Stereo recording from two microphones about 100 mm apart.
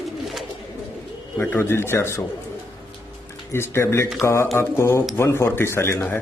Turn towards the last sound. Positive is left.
turn(degrees=25)  # may be behind; listen again after turning